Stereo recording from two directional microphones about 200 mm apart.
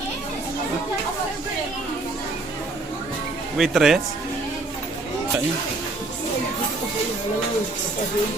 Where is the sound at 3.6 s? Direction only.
Centre (ahead or behind).